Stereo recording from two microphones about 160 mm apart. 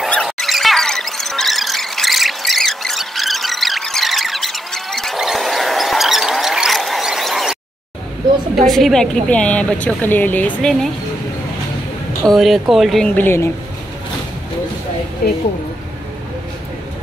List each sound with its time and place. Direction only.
0.0 s a sound: 5° left (ahead or behind)
8.6 s a woman's voice: centre (ahead or behind)
12.3 s speech: centre (ahead or behind)
15.2 s speech: 70° left (ahead or behind)